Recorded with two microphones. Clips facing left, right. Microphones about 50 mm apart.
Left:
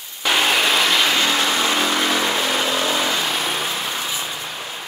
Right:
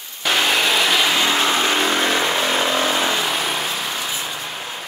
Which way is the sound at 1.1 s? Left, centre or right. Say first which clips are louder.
Right 1 dB; right.